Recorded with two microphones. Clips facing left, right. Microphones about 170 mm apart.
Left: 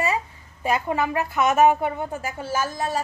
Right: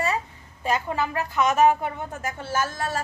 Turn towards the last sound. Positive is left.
turn(degrees=15)  # may be behind; listen again after turning